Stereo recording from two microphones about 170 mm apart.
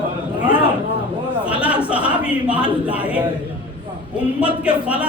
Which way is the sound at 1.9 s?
5° right (ahead or behind).